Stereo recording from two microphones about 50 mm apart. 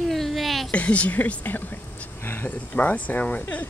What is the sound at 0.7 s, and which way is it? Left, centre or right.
Speech, left.